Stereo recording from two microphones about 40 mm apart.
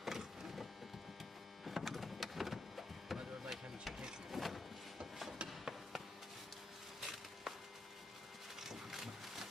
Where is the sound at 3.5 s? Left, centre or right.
Centre.